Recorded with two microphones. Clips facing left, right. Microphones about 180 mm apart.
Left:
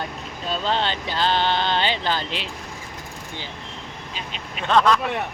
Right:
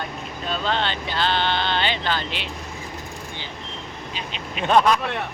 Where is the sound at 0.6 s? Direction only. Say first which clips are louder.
Left 1 dB; 35° left (ahead or behind).